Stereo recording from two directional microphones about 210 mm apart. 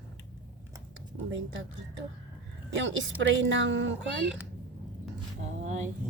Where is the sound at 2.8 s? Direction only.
60° right (ahead or behind).